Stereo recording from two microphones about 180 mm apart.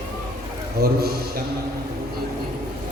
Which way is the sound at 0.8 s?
60° right (ahead or behind).